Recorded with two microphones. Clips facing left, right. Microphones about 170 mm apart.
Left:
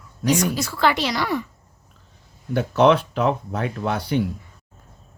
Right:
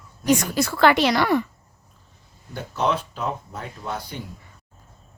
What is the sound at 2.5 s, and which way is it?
Speech, 70° left (ahead or behind).